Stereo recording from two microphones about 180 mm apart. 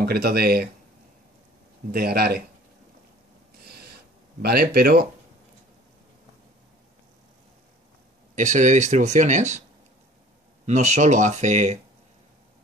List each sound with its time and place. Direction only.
0.0 s speech: 60° right (ahead or behind)
1.9 s speech: 60° right (ahead or behind)
3.6 s a sound: 60° right (ahead or behind)
4.4 s speech: 60° right (ahead or behind)
8.4 s speech: 45° right (ahead or behind)
10.6 s speech: 40° right (ahead or behind)